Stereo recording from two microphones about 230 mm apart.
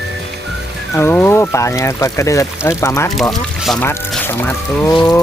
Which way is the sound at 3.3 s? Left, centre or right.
Centre.